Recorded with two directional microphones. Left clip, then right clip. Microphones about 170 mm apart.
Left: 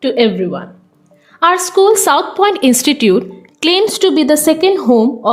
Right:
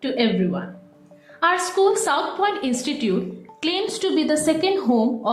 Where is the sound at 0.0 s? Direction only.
65° left (ahead or behind).